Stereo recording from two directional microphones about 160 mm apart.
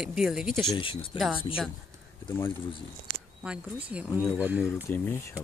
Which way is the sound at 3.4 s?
5° right (ahead or behind).